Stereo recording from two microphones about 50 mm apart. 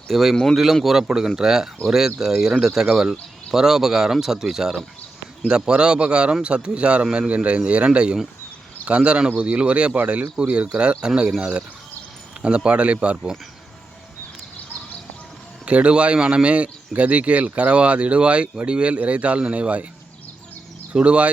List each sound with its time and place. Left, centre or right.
0.1 s speech: centre; by 13.3 s right
15.6 s speech: right
20.9 s speech: right